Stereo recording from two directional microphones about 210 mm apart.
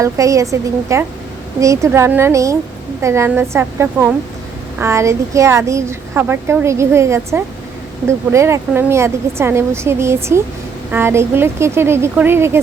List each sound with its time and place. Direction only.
0.0 s a woman's voice: 15° right (ahead or behind)